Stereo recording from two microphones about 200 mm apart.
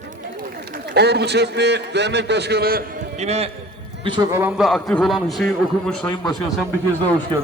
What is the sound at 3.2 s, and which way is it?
A man's voice, 30° right (ahead or behind).